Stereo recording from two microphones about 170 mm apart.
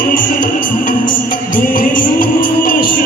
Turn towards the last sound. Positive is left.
turn(degrees=55)  # may be behind; listen again after turning